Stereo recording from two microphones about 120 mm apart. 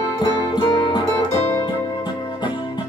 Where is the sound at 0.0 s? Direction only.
40° left (ahead or behind).